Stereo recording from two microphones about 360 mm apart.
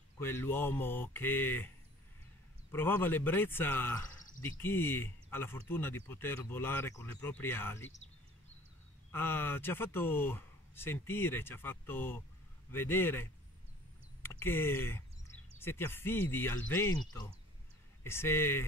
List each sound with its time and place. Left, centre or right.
0.2 s speech: centre
2.7 s speech: centre
9.1 s speech: centre